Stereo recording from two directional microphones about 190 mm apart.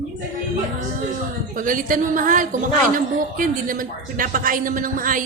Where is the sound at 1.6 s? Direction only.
45° right (ahead or behind).